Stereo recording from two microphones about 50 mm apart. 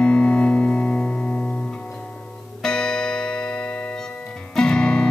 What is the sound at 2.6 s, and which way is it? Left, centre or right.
Music, centre.